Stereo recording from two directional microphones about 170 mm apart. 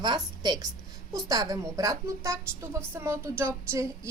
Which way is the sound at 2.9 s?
15° right (ahead or behind).